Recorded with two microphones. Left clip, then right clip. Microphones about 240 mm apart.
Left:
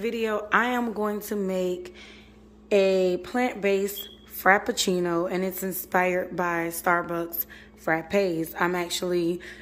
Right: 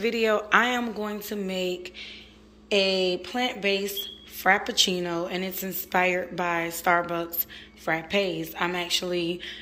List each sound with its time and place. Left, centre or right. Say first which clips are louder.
0.0 s a woman's voice: right 3 dB; centre